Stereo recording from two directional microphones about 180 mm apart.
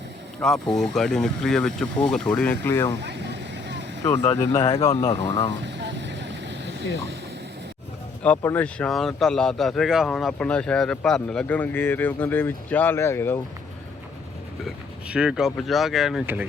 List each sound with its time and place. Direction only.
0.4 s speech: centre (ahead or behind)
3.0 s vehicle: 70° right (ahead or behind)
4.2 s speech: 25° left (ahead or behind)
5.5 s vehicle: 75° right (ahead or behind)
8.2 s speech: 10° left (ahead or behind)
14.6 s speech: 5° right (ahead or behind)